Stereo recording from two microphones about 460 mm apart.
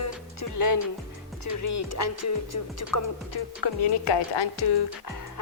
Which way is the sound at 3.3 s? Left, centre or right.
Left.